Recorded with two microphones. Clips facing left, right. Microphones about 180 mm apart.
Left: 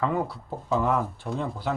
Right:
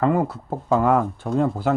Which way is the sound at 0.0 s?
50° right (ahead or behind).